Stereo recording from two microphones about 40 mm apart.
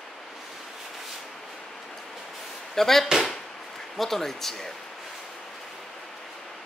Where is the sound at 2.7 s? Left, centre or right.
Centre.